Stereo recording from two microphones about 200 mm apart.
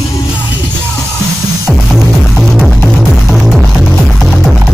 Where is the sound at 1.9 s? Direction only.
Centre (ahead or behind).